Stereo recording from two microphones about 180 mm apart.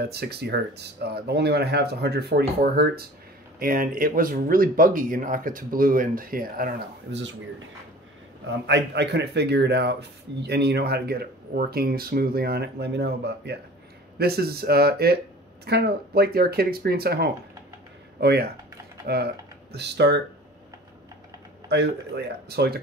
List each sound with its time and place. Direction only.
0.0 s speech: 60° right (ahead or behind)
7.1 s speech: 80° right
8.5 s speech: 75° right (ahead or behind)
21.6 s speech: 65° right (ahead or behind)